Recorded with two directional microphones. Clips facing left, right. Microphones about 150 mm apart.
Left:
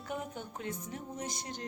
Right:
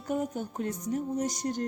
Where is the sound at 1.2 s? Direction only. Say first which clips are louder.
Right 10 dB; 45° right (ahead or behind).